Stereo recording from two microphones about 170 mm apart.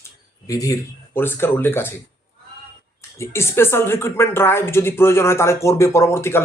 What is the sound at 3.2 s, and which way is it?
A man's voice, 15° left (ahead or behind).